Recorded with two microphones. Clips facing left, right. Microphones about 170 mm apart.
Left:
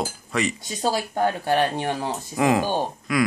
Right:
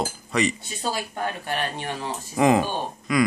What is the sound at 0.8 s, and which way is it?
Speech, 30° left (ahead or behind).